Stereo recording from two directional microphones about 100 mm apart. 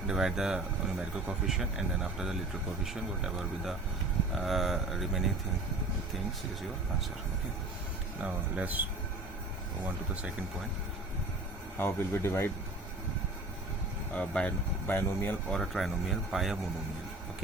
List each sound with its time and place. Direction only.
0.1 s speech: 5° right (ahead or behind)
8.5 s speech: 15° right (ahead or behind)
11.8 s speech: 25° left (ahead or behind)
14.1 s speech: 15° left (ahead or behind)
15.4 s speech: 5° left (ahead or behind)